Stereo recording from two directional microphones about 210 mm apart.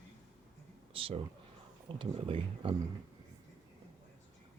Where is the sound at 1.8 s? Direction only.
25° right (ahead or behind).